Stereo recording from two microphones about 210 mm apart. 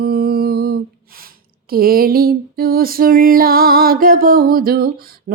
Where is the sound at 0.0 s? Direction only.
45° right (ahead or behind).